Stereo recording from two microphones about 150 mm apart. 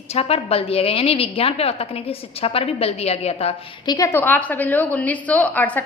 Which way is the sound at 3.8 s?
25° left (ahead or behind).